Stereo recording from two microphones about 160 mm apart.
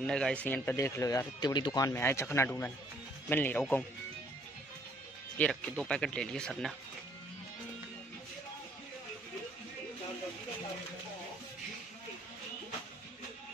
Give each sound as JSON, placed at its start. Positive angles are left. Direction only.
{"t": 0.0, "sound": "speech", "side_deg": 5}
{"t": 5.4, "sound": "speech", "side_deg": 5}